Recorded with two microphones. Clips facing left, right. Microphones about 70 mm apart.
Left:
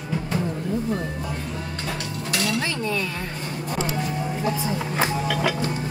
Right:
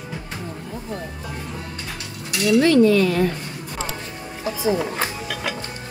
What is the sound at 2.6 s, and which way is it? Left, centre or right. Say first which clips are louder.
Cutlery: right 12 dB; centre.